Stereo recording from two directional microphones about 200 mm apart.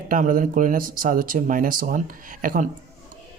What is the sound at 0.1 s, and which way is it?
A man's voice, 40° right (ahead or behind).